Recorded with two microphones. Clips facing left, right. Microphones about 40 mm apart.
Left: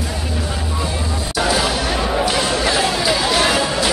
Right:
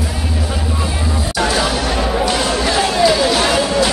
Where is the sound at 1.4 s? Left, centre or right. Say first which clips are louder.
Right 1 dB; centre.